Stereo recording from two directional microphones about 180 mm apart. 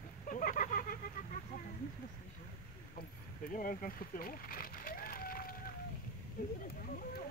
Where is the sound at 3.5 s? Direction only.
50° left (ahead or behind).